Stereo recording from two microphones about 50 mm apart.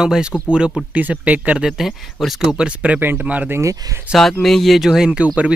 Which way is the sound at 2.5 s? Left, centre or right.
Right.